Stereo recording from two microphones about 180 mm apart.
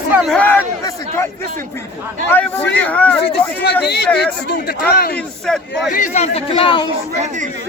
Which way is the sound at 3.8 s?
65° left (ahead or behind).